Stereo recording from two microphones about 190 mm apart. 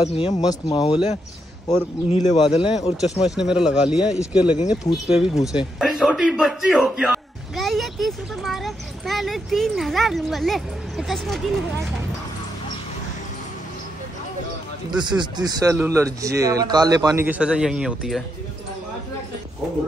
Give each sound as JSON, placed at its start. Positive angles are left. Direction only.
{"t": 0.0, "sound": "speech", "side_deg": 30}
{"t": 0.3, "sound": "speech", "side_deg": 20}
{"t": 2.1, "sound": "speech", "side_deg": 30}
{"t": 3.3, "sound": "a man's voice", "side_deg": -5}
{"t": 4.6, "sound": "speech", "side_deg": 25}
{"t": 5.5, "sound": "a man's voice", "side_deg": 0}
{"t": 14.9, "sound": "speech", "side_deg": -20}